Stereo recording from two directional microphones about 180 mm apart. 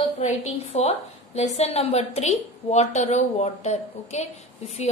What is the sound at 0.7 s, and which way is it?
A woman's voice, 35° left (ahead or behind).